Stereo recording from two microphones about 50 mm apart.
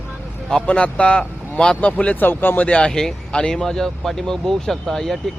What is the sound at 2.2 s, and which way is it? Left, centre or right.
Speech, left.